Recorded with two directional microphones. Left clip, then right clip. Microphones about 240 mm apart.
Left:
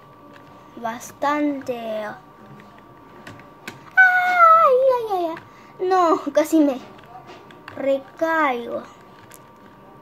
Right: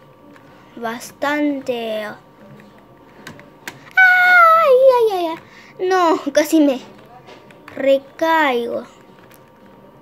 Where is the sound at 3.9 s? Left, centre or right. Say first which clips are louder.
Right 5 dB; centre.